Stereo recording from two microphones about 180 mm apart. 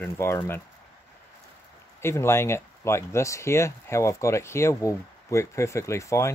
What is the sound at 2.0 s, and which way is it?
Speech, 15° left (ahead or behind).